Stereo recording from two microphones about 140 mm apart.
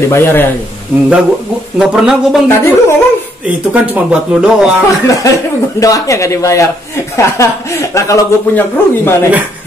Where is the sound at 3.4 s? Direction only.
10° right (ahead or behind).